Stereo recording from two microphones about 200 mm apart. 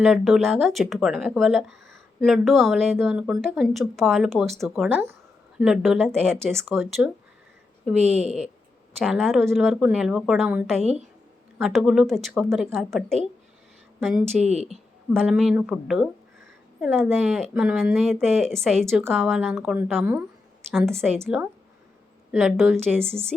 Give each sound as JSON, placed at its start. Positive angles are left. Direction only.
{"t": 0.0, "sound": "speech", "side_deg": 0}
{"t": 7.9, "sound": "a woman's voice", "side_deg": -35}
{"t": 9.0, "sound": "speech", "side_deg": 0}
{"t": 14.4, "sound": "a woman's voice", "side_deg": -35}
{"t": 15.1, "sound": "a woman's voice", "side_deg": 0}